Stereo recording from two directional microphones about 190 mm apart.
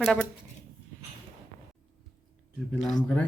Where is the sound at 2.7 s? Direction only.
Centre (ahead or behind).